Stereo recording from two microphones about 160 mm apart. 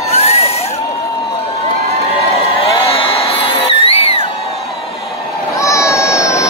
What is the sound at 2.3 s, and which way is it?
Crowd, 40° left (ahead or behind).